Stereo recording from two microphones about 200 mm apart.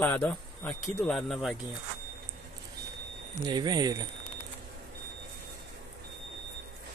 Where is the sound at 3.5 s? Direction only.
20° right (ahead or behind).